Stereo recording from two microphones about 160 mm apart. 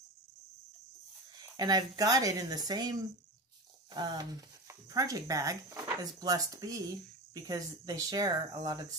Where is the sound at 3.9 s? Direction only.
25° right (ahead or behind).